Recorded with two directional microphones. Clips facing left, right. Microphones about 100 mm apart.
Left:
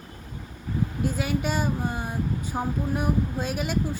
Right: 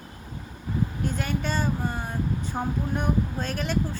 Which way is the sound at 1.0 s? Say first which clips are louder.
Left 2 dB; 5° left (ahead or behind).